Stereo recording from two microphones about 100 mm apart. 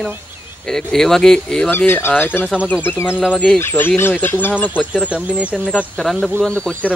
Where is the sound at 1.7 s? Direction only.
25° left (ahead or behind).